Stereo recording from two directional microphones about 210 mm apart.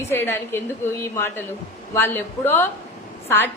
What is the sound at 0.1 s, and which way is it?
A woman's voice, 10° left (ahead or behind).